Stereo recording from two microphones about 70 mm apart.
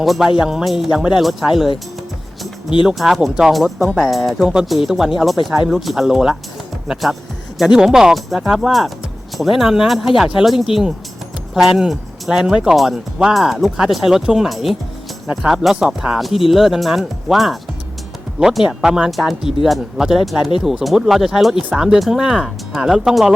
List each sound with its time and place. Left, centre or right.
0.0 s speech: centre
2.8 s speech: centre